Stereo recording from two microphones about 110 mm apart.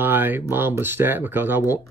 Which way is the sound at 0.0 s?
15° right (ahead or behind).